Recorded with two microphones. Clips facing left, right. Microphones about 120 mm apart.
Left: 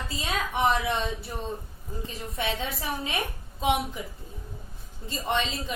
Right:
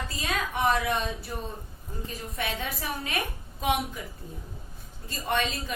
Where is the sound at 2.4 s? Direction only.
25° left (ahead or behind).